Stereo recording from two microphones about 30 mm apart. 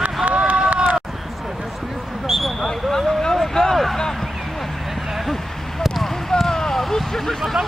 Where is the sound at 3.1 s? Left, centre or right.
Centre.